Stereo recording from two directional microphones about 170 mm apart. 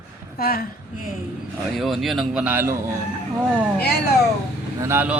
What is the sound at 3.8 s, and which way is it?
Speech, 70° left (ahead or behind).